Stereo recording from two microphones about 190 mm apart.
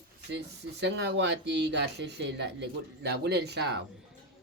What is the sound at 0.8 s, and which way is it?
Speech, 65° right (ahead or behind).